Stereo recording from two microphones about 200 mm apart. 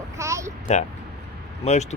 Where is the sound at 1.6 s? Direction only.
35° left (ahead or behind).